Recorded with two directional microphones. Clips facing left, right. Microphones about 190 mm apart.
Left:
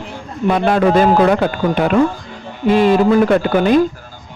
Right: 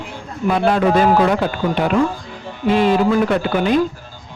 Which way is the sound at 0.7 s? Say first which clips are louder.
Left 4 dB; 50° left (ahead or behind).